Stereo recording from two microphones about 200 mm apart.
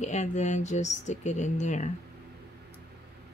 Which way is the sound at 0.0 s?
35° left (ahead or behind).